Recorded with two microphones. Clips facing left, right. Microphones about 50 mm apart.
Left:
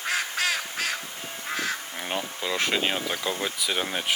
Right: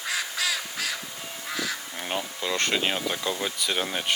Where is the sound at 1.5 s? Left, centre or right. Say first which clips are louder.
Left 2 dB; left.